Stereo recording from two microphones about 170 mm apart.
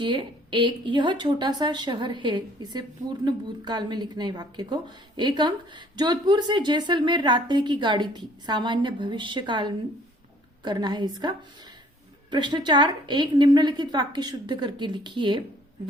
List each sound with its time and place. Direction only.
0.0 s a woman's voice: 30° right (ahead or behind)